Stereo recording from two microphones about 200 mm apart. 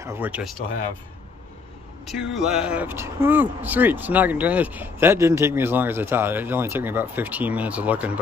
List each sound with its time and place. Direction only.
0.0 s speech: 10° right (ahead or behind)
2.0 s speech: centre (ahead or behind)